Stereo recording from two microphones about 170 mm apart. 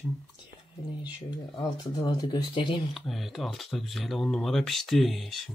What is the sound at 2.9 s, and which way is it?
Speech, centre (ahead or behind).